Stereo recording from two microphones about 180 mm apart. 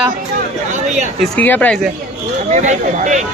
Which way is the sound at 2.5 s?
40° right (ahead or behind).